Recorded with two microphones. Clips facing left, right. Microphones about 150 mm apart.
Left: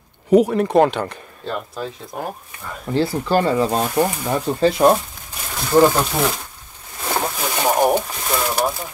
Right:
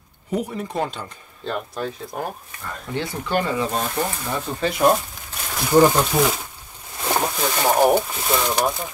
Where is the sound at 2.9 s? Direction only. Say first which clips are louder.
Left 6 dB; 35° left (ahead or behind).